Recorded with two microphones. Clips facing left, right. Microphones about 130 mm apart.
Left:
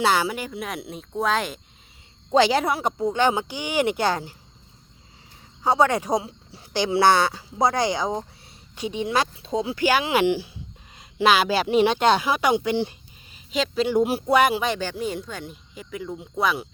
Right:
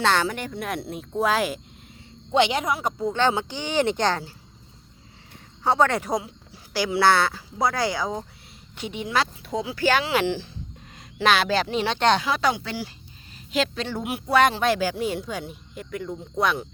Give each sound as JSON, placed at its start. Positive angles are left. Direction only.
{"t": 0.0, "sound": "speech", "side_deg": 10}
{"t": 2.3, "sound": "a woman's voice", "side_deg": 35}
{"t": 3.0, "sound": "speech", "side_deg": 15}
{"t": 5.6, "sound": "speech", "side_deg": 15}
{"t": 13.5, "sound": "speech", "side_deg": 0}
{"t": 14.0, "sound": "a woman's voice", "side_deg": 35}
{"t": 14.3, "sound": "speech", "side_deg": 10}
{"t": 14.6, "sound": "speech", "side_deg": -5}